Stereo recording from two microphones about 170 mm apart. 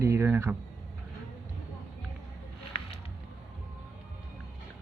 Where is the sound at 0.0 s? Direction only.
15° right (ahead or behind).